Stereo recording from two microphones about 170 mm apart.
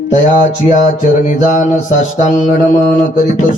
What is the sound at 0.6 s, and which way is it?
Music, 50° left (ahead or behind).